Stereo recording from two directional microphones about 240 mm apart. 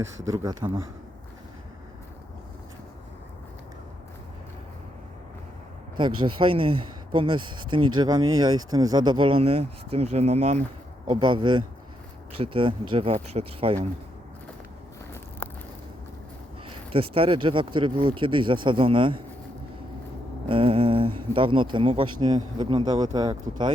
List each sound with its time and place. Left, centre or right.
0.3 s speech: centre
6.0 s speech: centre
15.4 s a sound: centre
16.9 s speech: right
20.5 s speech: right